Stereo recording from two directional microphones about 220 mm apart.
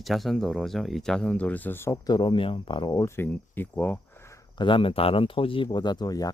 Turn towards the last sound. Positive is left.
turn(degrees=15)  # may be behind; listen again after turning